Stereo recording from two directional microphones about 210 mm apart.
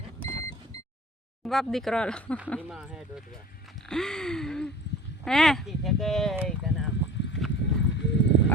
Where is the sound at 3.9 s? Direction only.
5° left (ahead or behind).